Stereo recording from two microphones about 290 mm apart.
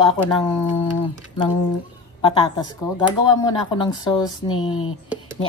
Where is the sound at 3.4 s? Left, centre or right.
Centre.